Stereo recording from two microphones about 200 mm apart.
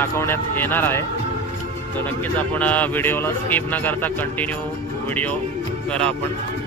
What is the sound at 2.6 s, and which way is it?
Speech, 10° left (ahead or behind).